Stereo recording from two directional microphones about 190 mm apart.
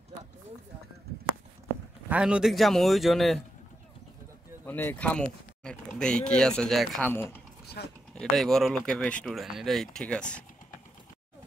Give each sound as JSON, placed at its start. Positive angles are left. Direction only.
{"t": 2.0, "sound": "speech", "side_deg": -5}
{"t": 4.6, "sound": "speech", "side_deg": 10}
{"t": 7.8, "sound": "speech", "side_deg": 55}
{"t": 8.1, "sound": "speech", "side_deg": 5}